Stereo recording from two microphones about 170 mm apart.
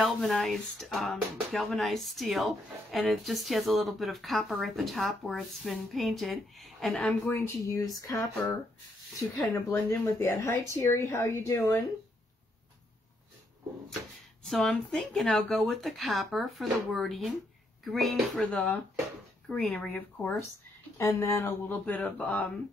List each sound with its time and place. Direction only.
0.0 s speech: centre (ahead or behind); by 11.8 s 20° left (ahead or behind)
14.4 s speech: centre (ahead or behind)